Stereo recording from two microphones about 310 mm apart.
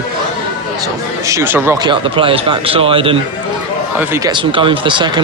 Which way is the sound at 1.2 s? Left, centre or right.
Centre.